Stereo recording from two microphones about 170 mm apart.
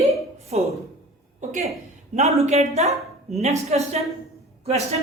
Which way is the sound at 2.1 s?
40° right (ahead or behind).